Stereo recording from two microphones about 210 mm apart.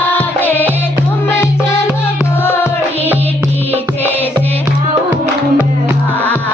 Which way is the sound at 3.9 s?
10° left (ahead or behind).